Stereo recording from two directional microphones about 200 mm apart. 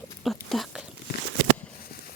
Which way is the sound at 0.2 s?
Centre (ahead or behind).